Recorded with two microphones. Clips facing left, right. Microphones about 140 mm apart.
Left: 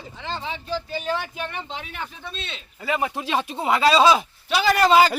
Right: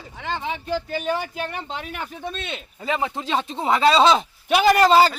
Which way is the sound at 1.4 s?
40° right (ahead or behind).